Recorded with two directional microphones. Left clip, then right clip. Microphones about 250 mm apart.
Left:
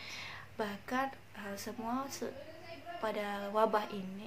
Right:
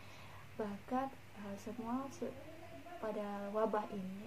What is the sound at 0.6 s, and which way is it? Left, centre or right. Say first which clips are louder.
A woman's voice: left 4 dB; centre.